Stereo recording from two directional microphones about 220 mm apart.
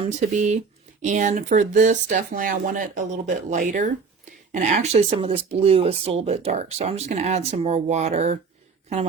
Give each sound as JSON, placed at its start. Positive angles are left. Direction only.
{"t": 0.0, "sound": "speech", "side_deg": -30}